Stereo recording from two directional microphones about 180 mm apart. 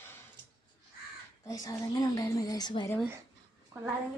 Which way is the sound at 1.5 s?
20° left (ahead or behind).